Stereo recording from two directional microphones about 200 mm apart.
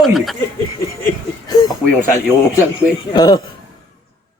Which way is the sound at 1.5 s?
20° left (ahead or behind).